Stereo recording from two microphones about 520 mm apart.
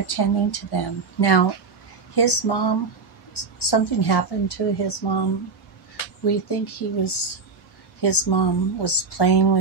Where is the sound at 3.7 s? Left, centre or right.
Left.